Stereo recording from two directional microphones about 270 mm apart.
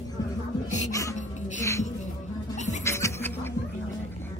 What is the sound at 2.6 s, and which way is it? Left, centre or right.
Music, left.